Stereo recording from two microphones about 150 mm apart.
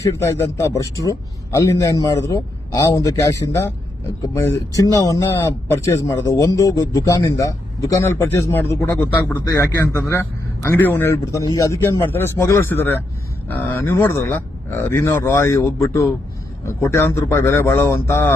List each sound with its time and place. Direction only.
0.0 s a man's voice: 20° left (ahead or behind)
4.8 s a man's voice: 20° left (ahead or behind)